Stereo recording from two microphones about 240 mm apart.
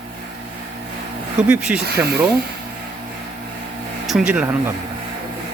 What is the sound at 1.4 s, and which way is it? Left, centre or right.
Speech, centre.